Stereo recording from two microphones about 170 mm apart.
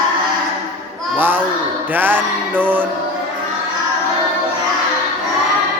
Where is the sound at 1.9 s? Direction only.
10° right (ahead or behind).